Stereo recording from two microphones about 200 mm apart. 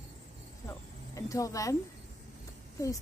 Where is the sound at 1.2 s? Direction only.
15° left (ahead or behind).